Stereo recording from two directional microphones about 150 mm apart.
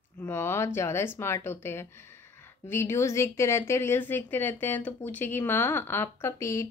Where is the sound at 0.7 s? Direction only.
15° left (ahead or behind).